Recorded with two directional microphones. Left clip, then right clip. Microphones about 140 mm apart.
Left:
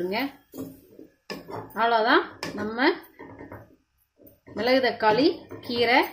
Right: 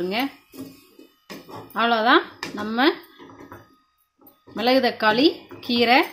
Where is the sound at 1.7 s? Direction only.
85° right.